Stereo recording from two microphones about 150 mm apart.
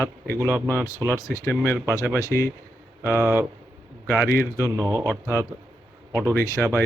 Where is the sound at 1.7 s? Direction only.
10° right (ahead or behind).